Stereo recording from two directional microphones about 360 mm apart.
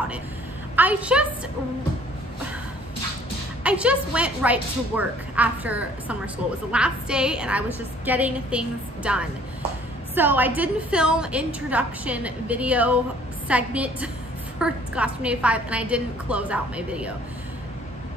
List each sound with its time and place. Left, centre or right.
0.7 s speech: centre
3.6 s speech: centre